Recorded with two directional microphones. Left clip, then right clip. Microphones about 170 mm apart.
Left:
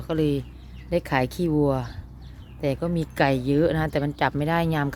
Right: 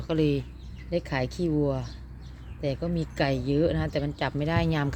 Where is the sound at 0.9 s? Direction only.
15° left (ahead or behind).